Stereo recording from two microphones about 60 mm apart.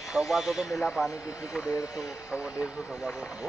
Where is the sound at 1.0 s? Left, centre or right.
Left.